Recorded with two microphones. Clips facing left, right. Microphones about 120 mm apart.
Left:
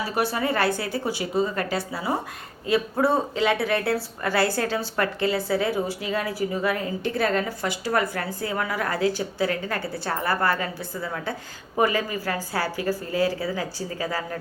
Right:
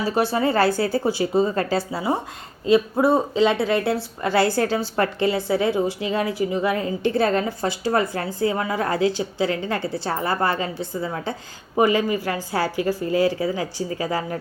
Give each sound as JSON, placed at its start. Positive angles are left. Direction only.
{"t": 0.1, "sound": "a woman's voice", "side_deg": -25}